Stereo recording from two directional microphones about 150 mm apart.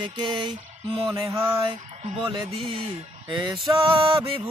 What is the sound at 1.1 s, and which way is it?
Music, 20° right (ahead or behind).